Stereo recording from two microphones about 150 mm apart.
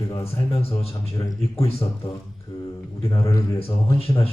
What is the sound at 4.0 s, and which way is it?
Speech, 40° left (ahead or behind).